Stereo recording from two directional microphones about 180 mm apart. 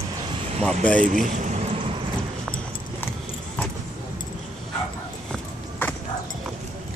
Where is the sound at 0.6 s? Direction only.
5° left (ahead or behind).